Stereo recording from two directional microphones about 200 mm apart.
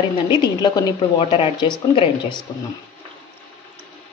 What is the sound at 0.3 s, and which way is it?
A woman's voice, 20° left (ahead or behind).